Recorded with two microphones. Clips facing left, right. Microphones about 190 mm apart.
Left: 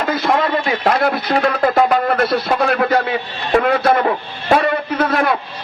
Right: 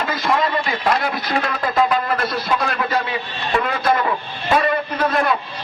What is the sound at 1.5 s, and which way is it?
Speech, 55° left (ahead or behind).